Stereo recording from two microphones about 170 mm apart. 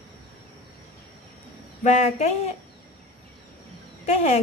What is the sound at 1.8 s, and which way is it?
Speech, 40° left (ahead or behind).